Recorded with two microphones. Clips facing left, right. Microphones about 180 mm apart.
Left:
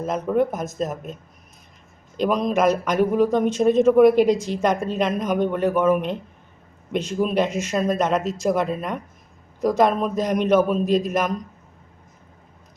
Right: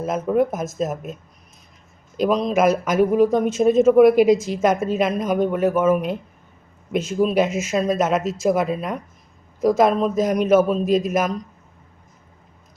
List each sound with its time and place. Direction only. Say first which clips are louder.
0.3 s speech: right 2 dB; 5° right (ahead or behind)
2.1 s speech: right 2 dB; 5° right (ahead or behind)